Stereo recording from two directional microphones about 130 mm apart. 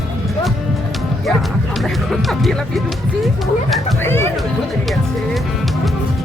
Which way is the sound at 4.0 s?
20° left (ahead or behind).